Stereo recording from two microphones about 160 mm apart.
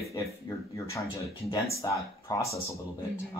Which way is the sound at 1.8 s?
20° left (ahead or behind).